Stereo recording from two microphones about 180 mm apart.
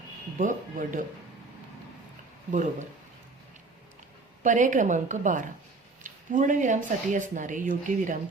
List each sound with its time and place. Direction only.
0.3 s speech: 45° right (ahead or behind)
2.5 s speech: 45° right (ahead or behind)
4.4 s speech: 45° right (ahead or behind)